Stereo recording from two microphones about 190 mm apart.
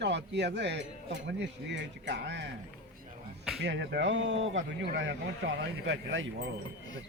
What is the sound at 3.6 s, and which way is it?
Speech, 65° right (ahead or behind).